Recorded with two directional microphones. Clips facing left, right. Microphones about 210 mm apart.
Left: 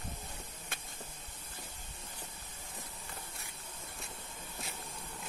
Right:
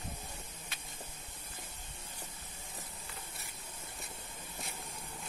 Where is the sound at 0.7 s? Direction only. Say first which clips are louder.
Left 3 dB; 50° left (ahead or behind).